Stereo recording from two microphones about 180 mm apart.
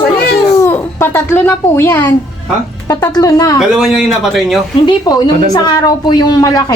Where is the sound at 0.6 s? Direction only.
10° left (ahead or behind).